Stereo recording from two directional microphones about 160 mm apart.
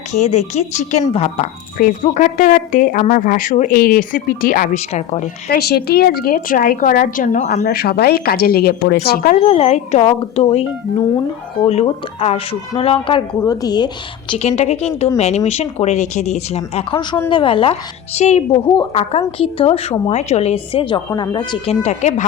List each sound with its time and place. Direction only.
0.1 s speech: 45° left (ahead or behind)
1.8 s a woman's voice: 55° left (ahead or behind)
4.8 s speech: 45° left (ahead or behind)
5.5 s a woman's voice: 80° left; by 7.6 s 55° left (ahead or behind)
7.6 s speech: 75° left (ahead or behind)
9.0 s a woman's voice: 60° left (ahead or behind)
9.4 s a woman's voice: 40° left (ahead or behind)
11.6 s a woman's voice: 40° left (ahead or behind)
13.4 s speech: 20° left (ahead or behind)
14.3 s a woman's voice: 40° left (ahead or behind)
18.2 s a woman's voice: 45° left (ahead or behind)